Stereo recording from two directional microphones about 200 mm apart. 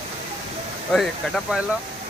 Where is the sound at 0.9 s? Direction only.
Centre (ahead or behind).